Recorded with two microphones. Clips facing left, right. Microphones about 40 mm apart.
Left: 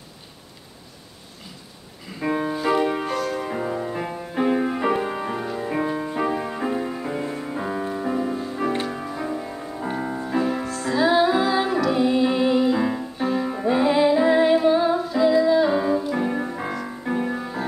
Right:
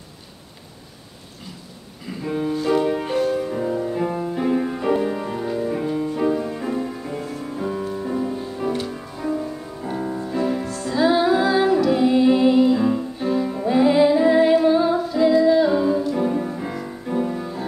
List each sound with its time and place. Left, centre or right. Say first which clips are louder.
2.2 s music: left 1 dB; left
2.5 s music: right 4 dB; centre
10.9 s music: right 1 dB; centre
12.7 s music: right 3 dB; centre
14.2 s humming: right 2 dB; centre
16.8 s music: right 3 dB; left